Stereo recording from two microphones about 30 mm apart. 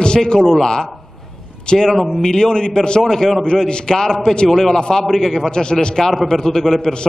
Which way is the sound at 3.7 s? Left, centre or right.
Left.